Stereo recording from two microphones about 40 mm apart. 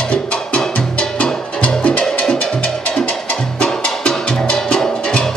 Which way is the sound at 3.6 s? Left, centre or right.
Left.